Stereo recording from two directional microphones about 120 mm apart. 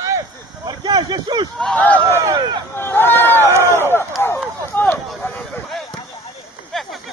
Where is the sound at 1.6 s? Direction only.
10° left (ahead or behind).